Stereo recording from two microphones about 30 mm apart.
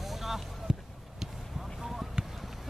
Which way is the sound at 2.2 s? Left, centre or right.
Right.